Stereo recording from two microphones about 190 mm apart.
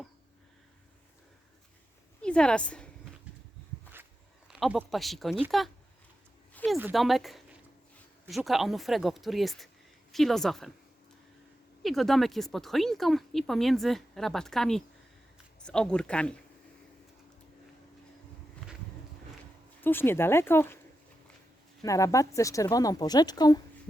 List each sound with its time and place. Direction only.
2.2 s a woman's voice: 5° left (ahead or behind)
4.4 s a woman's voice: centre (ahead or behind)
6.5 s a sound: 10° left (ahead or behind)
6.9 s a woman's voice: centre (ahead or behind)
8.4 s a woman's voice: centre (ahead or behind)
11.8 s a woman's voice: centre (ahead or behind)
19.8 s speech: 10° left (ahead or behind)
21.8 s speech: 15° left (ahead or behind)